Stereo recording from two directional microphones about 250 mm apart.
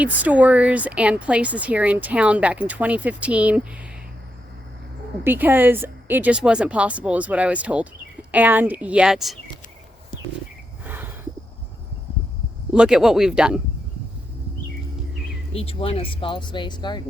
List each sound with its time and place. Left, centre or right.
0.0 s speech: centre
5.2 s speech: centre
10.8 s a sound: centre
12.7 s speech: centre
15.5 s speech: left